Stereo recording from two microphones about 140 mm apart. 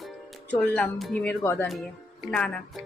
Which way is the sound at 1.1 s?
15° left (ahead or behind).